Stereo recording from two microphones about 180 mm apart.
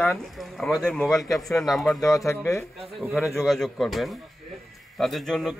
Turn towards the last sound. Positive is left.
turn(degrees=0)  # may be behind; listen again after turning